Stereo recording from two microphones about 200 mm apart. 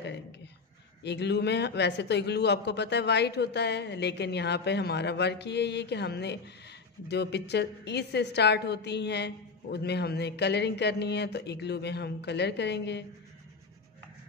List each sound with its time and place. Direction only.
1.0 s a woman's voice: 60° left (ahead or behind)